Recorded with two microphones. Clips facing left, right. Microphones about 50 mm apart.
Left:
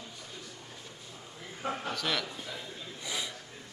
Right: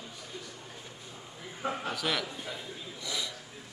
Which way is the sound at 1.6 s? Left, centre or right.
Centre.